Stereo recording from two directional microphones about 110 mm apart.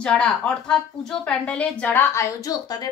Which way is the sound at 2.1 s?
30° left (ahead or behind).